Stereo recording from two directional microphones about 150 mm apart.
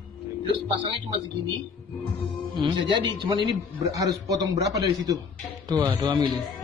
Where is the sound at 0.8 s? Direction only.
35° right (ahead or behind).